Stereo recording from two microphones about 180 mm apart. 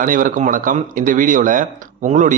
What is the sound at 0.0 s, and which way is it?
Speech, 50° right (ahead or behind).